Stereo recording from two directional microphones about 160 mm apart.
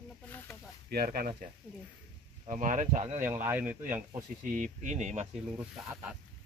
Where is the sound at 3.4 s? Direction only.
10° right (ahead or behind).